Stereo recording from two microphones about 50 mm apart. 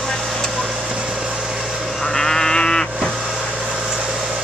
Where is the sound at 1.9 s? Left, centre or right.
Centre.